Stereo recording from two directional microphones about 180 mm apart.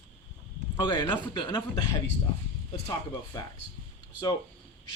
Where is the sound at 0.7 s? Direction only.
25° left (ahead or behind).